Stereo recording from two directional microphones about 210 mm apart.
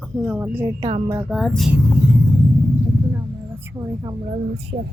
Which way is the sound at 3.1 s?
10° right (ahead or behind).